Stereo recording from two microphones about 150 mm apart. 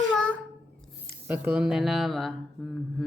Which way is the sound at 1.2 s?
10° right (ahead or behind).